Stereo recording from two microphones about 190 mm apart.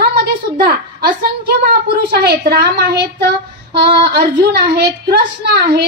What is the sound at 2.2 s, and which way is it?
Speech, 55° right (ahead or behind).